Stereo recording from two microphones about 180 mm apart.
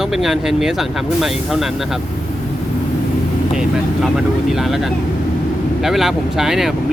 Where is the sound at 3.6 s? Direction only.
Centre (ahead or behind).